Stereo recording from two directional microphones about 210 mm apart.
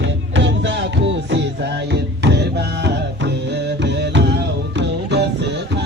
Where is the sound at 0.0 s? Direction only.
60° right (ahead or behind).